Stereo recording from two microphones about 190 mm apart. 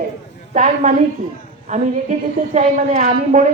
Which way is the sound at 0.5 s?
40° right (ahead or behind).